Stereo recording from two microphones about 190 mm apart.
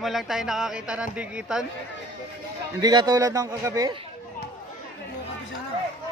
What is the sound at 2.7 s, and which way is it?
A man's voice, 20° right (ahead or behind).